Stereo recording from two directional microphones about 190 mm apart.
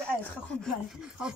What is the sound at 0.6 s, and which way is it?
Speech, centre (ahead or behind).